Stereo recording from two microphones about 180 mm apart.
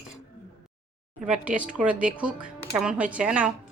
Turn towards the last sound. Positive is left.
turn(degrees=-5)  # may be behind; listen again after turning